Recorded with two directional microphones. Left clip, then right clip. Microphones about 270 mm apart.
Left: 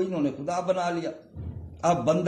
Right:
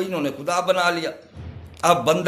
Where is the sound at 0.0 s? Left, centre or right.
Centre.